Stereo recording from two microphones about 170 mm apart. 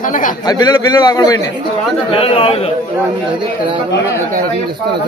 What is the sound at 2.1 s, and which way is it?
Speech, 35° left (ahead or behind).